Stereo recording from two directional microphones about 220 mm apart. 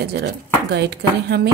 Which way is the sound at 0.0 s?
50° right (ahead or behind).